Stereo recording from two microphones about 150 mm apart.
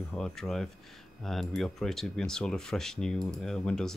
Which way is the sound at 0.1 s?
5° left (ahead or behind).